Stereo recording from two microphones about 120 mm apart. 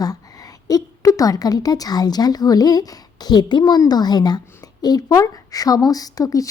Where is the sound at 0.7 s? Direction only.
30° left (ahead or behind).